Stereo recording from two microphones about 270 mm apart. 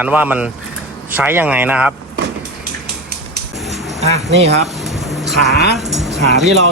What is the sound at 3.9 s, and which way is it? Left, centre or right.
Speech, right.